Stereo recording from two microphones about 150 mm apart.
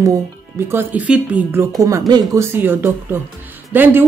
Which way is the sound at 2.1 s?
25° right (ahead or behind).